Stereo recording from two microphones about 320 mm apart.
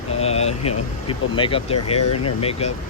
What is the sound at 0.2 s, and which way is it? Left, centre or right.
Vehicle, centre.